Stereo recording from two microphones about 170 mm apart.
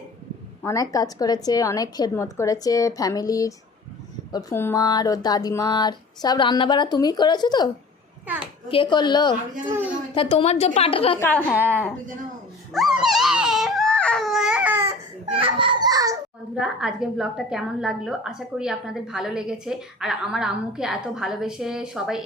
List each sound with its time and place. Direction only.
0.6 s speech: 20° left (ahead or behind)
8.3 s a woman's voice: 10° right (ahead or behind)
8.7 s speech: 30° left (ahead or behind)
10.2 s a woman's voice: 35° left (ahead or behind)
11.2 s a woman's voice: 10° left (ahead or behind)
11.5 s a woman's voice: 10° right (ahead or behind)
12.7 s baby cry: centre (ahead or behind)
15.3 s a child's voice: 30° right (ahead or behind)
16.6 s a woman's voice: 5° right (ahead or behind)